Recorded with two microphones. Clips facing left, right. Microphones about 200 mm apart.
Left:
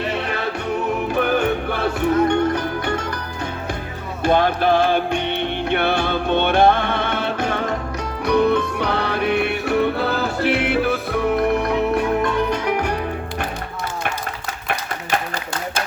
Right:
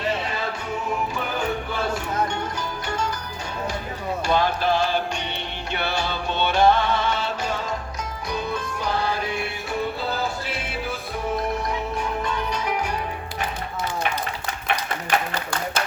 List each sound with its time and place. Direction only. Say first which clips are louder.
1.1 s music: left 8 dB; 65° left (ahead or behind)
4.2 s music: left 6 dB; 55° left (ahead or behind)